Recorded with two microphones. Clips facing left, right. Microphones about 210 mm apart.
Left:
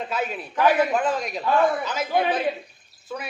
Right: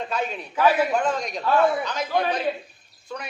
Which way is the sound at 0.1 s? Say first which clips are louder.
Even; 5° left (ahead or behind).